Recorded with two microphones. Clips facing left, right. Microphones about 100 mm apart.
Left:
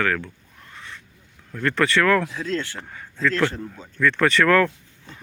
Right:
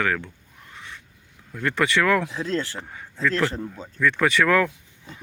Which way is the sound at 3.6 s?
25° right (ahead or behind).